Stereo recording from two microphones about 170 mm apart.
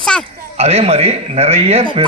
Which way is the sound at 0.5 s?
35° right (ahead or behind).